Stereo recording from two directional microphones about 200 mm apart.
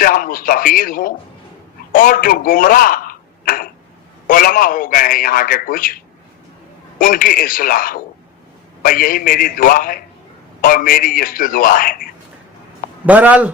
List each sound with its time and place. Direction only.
0.0 s a man's voice: 45° left (ahead or behind)
7.0 s a man's voice: 45° left (ahead or behind)
13.1 s speech: 10° right (ahead or behind)